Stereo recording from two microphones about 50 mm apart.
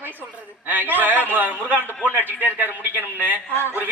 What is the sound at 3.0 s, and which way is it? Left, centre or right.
Speech, left.